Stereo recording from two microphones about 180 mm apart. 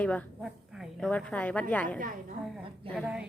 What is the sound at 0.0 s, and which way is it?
A woman's voice, 5° left (ahead or behind).